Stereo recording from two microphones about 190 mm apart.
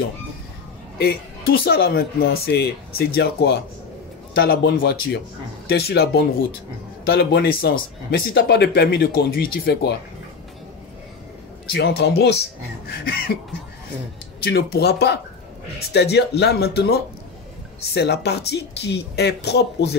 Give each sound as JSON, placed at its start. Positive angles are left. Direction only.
{"t": 1.6, "sound": "speech", "side_deg": 55}
{"t": 8.4, "sound": "speech", "side_deg": 65}
{"t": 11.7, "sound": "speech", "side_deg": 60}
{"t": 14.4, "sound": "speech", "side_deg": 55}
{"t": 17.9, "sound": "speech", "side_deg": 60}